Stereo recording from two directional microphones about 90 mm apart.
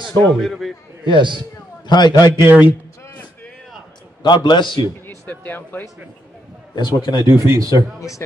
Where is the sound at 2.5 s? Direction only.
20° right (ahead or behind).